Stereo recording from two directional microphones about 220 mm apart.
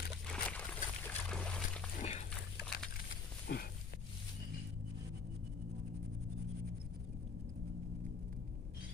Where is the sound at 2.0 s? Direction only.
30° left (ahead or behind).